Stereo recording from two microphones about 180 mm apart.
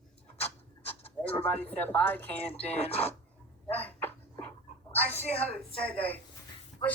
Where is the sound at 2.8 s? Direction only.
35° left (ahead or behind).